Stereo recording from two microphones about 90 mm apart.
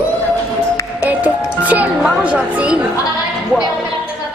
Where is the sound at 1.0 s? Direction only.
15° right (ahead or behind).